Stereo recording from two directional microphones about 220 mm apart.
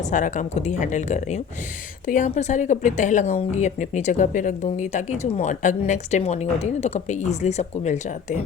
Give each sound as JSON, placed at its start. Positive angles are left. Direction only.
{"t": 0.0, "sound": "speech", "side_deg": 35}